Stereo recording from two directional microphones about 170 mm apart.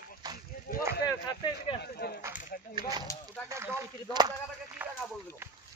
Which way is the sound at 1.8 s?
65° left (ahead or behind).